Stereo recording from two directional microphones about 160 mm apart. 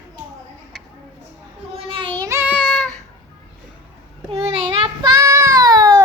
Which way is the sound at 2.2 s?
15° right (ahead or behind).